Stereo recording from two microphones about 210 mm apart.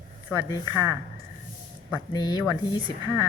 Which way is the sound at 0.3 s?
15° left (ahead or behind).